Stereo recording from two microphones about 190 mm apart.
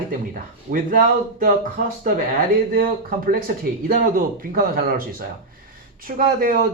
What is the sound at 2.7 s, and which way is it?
Speech, 50° right (ahead or behind).